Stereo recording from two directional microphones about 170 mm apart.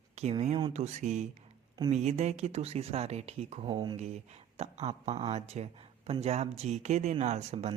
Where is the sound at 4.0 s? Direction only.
40° right (ahead or behind).